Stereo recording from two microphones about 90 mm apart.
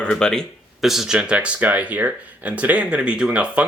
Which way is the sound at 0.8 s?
5° right (ahead or behind).